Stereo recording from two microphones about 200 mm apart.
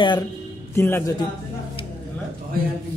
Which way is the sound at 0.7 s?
10° left (ahead or behind).